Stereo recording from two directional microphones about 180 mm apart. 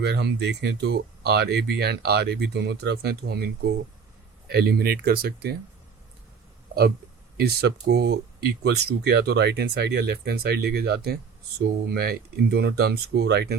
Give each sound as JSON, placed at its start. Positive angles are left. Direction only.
{"t": 0.0, "sound": "speech", "side_deg": -70}
{"t": 7.3, "sound": "speech", "side_deg": -60}